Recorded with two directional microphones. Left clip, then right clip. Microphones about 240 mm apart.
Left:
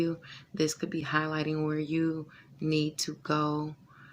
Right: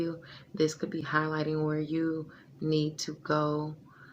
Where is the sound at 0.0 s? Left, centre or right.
Left.